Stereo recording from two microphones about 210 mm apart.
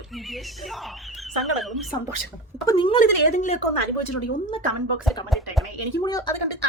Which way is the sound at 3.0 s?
35° left (ahead or behind).